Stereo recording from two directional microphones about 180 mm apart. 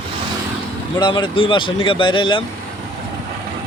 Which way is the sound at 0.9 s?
25° left (ahead or behind).